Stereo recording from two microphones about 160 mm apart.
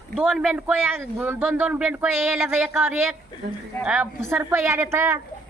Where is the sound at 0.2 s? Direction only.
10° right (ahead or behind).